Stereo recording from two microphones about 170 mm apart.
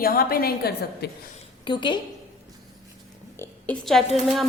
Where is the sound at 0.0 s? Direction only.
60° left (ahead or behind).